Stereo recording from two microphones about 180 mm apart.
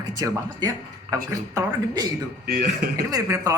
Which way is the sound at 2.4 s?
65° right (ahead or behind).